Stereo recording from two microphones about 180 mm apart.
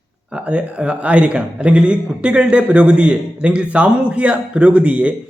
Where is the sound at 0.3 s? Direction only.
5° right (ahead or behind).